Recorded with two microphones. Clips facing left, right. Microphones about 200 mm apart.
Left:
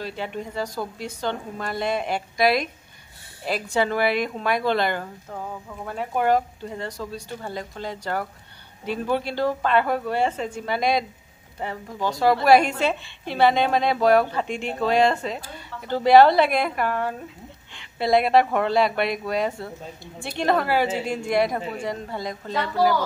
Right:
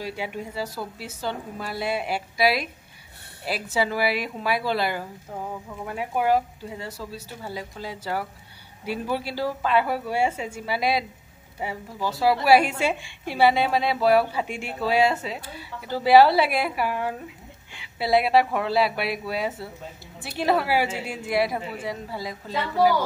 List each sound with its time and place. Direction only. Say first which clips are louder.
0.0 s a woman's voice: left 1 dB; 10° right (ahead or behind)